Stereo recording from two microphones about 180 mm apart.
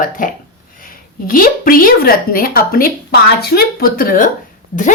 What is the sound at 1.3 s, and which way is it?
A woman's voice, 55° left (ahead or behind).